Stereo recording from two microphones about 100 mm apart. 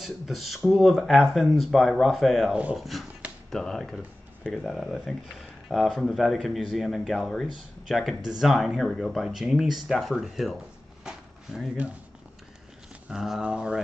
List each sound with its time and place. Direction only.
0.0 s speech: centre (ahead or behind)
11.1 s a sound: 5° right (ahead or behind)
13.1 s speech: 5° right (ahead or behind)